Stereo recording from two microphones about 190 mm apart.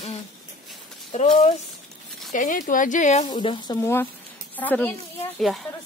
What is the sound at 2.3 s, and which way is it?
Speech, 45° left (ahead or behind).